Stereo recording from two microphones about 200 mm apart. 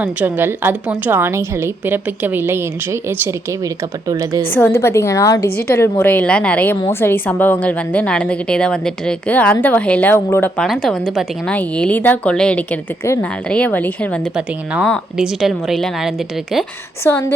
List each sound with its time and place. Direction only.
0.0 s a woman's voice: 10° right (ahead or behind)
4.5 s a woman's voice: 10° left (ahead or behind)
14.3 s a woman's voice: 5° right (ahead or behind)
17.0 s a woman's voice: 10° left (ahead or behind)